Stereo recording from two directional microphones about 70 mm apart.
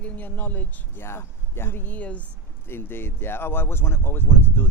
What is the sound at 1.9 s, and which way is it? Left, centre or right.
Speech, left.